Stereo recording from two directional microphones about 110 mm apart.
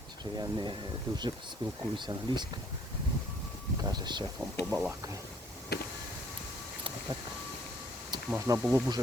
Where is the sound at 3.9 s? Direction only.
40° right (ahead or behind).